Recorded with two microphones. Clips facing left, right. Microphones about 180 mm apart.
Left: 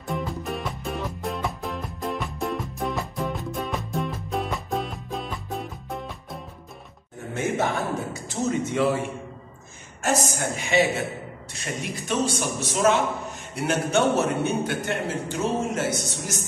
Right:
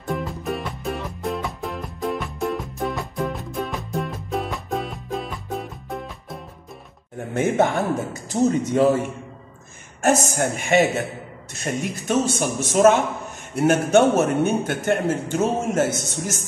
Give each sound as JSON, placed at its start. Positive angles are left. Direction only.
{"t": 0.0, "sound": "music", "side_deg": 0}
{"t": 7.3, "sound": "speech", "side_deg": -55}
{"t": 8.3, "sound": "speech", "side_deg": -40}
{"t": 10.0, "sound": "a man's voice", "side_deg": -55}